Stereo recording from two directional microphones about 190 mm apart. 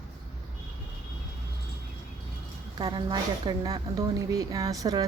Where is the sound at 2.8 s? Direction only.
20° right (ahead or behind).